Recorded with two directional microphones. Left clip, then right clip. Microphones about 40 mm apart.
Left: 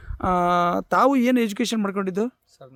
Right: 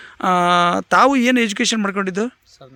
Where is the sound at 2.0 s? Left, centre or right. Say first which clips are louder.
Right 4 dB; centre.